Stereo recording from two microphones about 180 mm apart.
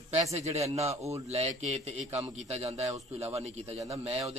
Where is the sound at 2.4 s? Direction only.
35° right (ahead or behind).